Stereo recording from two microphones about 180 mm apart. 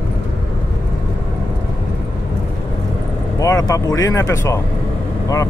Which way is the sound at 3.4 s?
20° left (ahead or behind).